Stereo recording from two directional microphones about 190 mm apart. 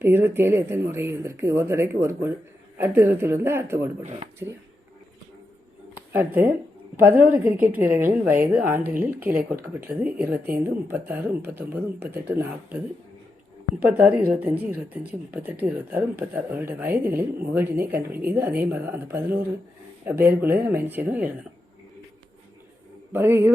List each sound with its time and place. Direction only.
0.0 s speech: 10° right (ahead or behind)
4.0 s speech: 35° right (ahead or behind)
6.1 s speech: 10° right (ahead or behind)
14.3 s speech: 10° right (ahead or behind)
23.1 s speech: 10° right (ahead or behind)